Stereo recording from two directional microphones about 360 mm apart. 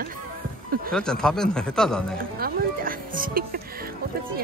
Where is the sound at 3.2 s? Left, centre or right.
Right.